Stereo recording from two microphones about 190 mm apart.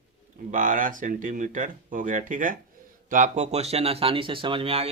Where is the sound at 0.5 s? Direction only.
45° right (ahead or behind).